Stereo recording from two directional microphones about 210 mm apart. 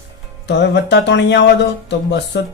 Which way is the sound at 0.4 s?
55° left (ahead or behind).